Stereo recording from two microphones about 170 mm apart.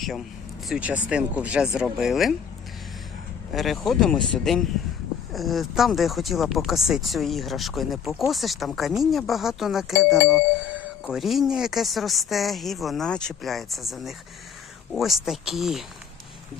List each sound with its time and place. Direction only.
0.0 s speech: centre (ahead or behind)
3.5 s speech: centre (ahead or behind)